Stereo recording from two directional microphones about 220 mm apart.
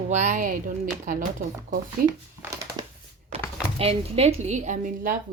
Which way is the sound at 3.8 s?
30° right (ahead or behind).